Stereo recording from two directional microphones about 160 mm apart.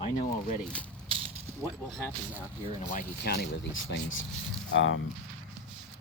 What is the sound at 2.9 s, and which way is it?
Speech, 65° left (ahead or behind).